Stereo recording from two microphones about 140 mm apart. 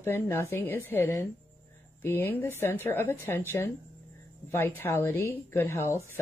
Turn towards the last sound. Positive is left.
turn(degrees=20)  # may be behind; listen again after turning